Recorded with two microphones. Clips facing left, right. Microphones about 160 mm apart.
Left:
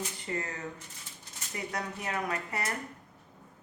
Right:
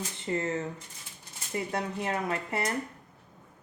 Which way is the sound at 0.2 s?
25° right (ahead or behind).